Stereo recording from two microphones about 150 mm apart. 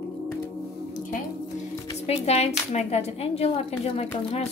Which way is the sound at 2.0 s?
45° left (ahead or behind).